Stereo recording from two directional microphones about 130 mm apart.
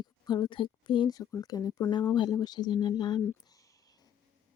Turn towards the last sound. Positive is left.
turn(degrees=35)  # may be behind; listen again after turning